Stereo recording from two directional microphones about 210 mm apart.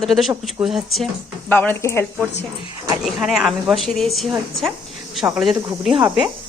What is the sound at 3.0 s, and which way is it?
Speech, centre (ahead or behind).